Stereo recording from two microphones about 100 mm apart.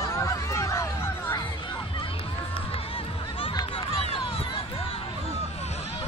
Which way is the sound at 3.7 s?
70° left (ahead or behind).